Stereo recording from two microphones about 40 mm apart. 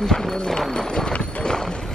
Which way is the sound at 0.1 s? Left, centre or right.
Centre.